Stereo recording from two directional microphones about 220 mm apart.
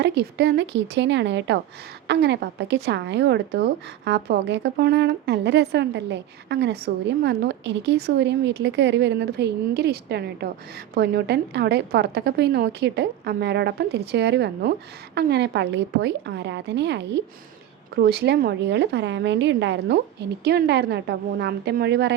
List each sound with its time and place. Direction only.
0.0 s speech: 50° right (ahead or behind)